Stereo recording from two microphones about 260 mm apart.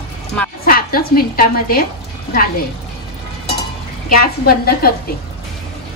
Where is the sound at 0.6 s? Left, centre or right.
Left.